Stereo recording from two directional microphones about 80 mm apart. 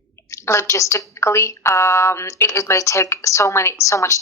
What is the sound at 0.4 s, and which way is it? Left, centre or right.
A woman's voice, left.